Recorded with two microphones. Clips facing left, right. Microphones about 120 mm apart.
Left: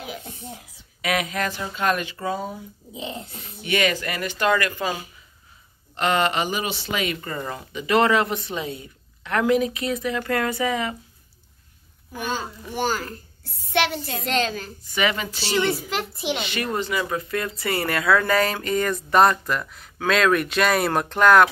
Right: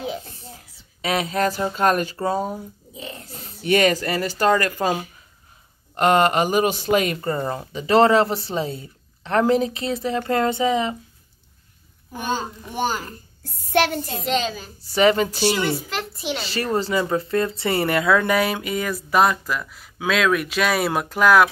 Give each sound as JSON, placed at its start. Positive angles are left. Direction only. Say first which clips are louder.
{"t": 1.0, "sound": "speech", "louder": "right 3 dB", "side_deg": -35}
{"t": 2.9, "sound": "babbling", "louder": "left 6 dB", "side_deg": 20}
{"t": 3.3, "sound": "speech", "louder": "right 10 dB", "side_deg": -40}
{"t": 5.9, "sound": "speech", "louder": "right 5 dB", "side_deg": -45}
{"t": 12.1, "sound": "a child's voice", "louder": "right 3 dB", "side_deg": -25}
{"t": 13.4, "sound": "child singing", "louder": "right 3 dB", "side_deg": -45}
{"t": 14.2, "sound": "speech", "louder": "even", "side_deg": -5}
{"t": 14.8, "sound": "speech", "louder": "right 8 dB", "side_deg": -35}
{"t": 15.4, "sound": "a woman's voice", "louder": "even", "side_deg": -10}
{"t": 15.7, "sound": "speech", "louder": "even", "side_deg": 5}
{"t": 16.4, "sound": "speech", "louder": "right 3 dB", "side_deg": -35}